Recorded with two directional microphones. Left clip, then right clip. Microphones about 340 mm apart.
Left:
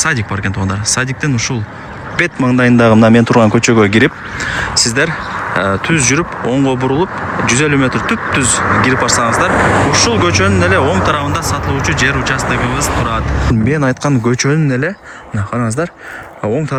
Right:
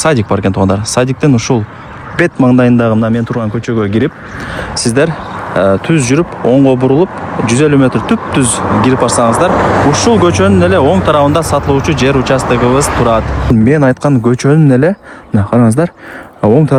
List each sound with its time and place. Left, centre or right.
0.0 s speech: centre
9.5 s speech: right
9.9 s speech: centre